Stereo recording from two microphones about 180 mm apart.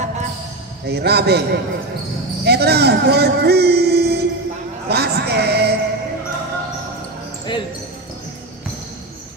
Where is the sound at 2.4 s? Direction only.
65° right (ahead or behind).